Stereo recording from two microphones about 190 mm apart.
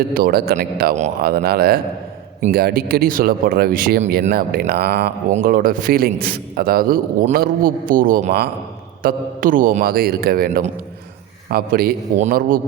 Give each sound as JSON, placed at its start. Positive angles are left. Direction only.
{"t": 0.1, "sound": "a man's voice", "side_deg": -50}